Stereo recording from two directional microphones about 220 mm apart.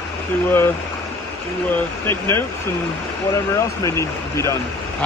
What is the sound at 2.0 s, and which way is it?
Speech, 10° left (ahead or behind).